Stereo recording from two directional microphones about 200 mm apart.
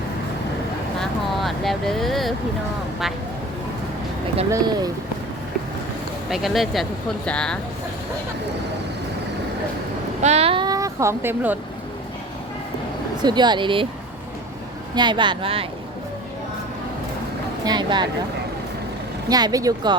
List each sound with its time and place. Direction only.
0.9 s speech: centre (ahead or behind)
4.5 s a woman's voice: 20° right (ahead or behind)
6.3 s speech: centre (ahead or behind)
10.2 s speech: 30° right (ahead or behind); by 11.5 s 10° right (ahead or behind)
13.2 s a woman's voice: 20° right (ahead or behind)
14.9 s a woman's voice: 20° right (ahead or behind)
17.7 s a woman's voice: 20° right (ahead or behind)
19.3 s a woman's voice: 20° right (ahead or behind)